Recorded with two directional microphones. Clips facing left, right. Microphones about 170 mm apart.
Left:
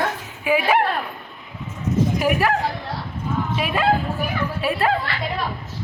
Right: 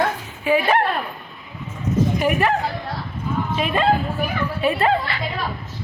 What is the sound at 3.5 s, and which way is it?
A woman's voice, 5° left (ahead or behind).